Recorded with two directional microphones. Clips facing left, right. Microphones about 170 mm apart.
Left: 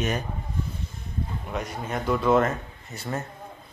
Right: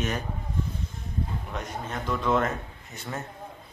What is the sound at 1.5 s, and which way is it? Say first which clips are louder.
A man's voice: left 5 dB; 10° left (ahead or behind).